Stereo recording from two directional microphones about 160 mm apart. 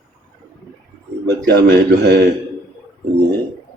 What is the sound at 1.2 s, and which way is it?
A man's voice, 90° right.